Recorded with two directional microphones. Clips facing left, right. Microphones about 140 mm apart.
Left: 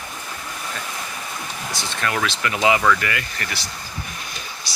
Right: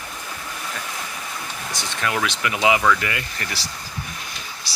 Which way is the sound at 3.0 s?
25° right (ahead or behind).